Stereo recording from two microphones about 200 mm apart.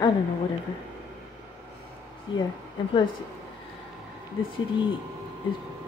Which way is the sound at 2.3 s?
25° left (ahead or behind).